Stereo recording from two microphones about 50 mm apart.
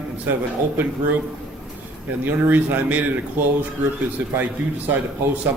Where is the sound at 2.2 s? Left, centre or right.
Right.